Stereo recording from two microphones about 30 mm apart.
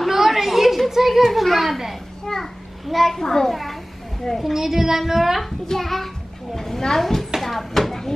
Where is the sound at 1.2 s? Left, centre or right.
Centre.